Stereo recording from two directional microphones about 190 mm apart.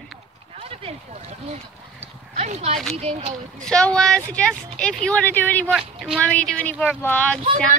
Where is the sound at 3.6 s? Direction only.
5° left (ahead or behind).